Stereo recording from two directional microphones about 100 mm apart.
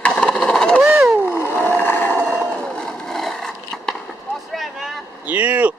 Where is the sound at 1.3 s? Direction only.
20° left (ahead or behind).